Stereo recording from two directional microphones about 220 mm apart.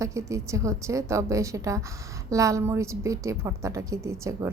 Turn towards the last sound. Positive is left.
turn(degrees=-15)  # may be behind; listen again after turning